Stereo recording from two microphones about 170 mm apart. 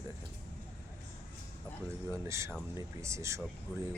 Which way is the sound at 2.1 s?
15° right (ahead or behind).